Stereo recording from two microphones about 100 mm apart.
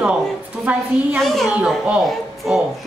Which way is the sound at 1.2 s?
Centre (ahead or behind).